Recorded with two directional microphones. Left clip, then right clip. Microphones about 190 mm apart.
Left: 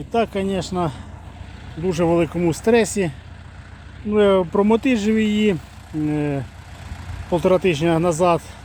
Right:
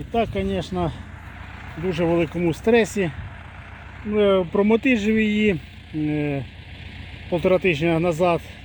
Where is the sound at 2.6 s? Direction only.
Centre (ahead or behind).